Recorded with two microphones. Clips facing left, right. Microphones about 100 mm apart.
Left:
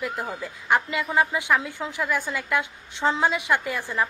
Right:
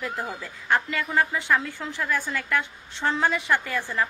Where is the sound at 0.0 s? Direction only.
10° left (ahead or behind).